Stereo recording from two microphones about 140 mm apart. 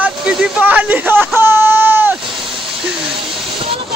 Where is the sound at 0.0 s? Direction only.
5° right (ahead or behind).